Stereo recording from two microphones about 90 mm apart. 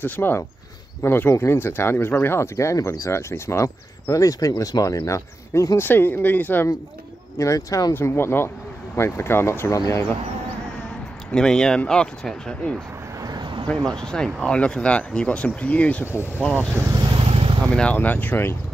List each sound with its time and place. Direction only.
0.0 s speech: 20° left (ahead or behind)
5.9 s speech: 25° left (ahead or behind)
7.3 s speech: 35° left (ahead or behind)
7.9 s speech: 25° left (ahead or behind)
11.3 s speech: 10° left (ahead or behind)
13.2 s a sound: 55° right (ahead or behind)
13.7 s speech: 5° left (ahead or behind)
16.5 s speech: 20° right (ahead or behind)
17.0 s vehicle: 80° right
17.7 s speech: 15° left (ahead or behind)